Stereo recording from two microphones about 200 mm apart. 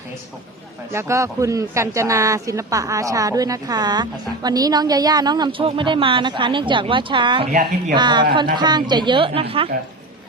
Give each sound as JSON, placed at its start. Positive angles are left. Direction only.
{"t": 0.9, "sound": "speech", "side_deg": -15}
{"t": 7.5, "sound": "a woman's voice", "side_deg": -40}
{"t": 7.9, "sound": "speech", "side_deg": -20}